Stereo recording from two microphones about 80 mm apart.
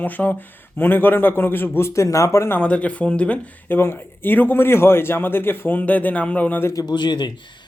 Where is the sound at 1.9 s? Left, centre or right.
Left.